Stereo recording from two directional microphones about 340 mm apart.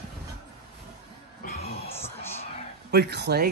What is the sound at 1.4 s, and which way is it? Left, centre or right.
Music, left.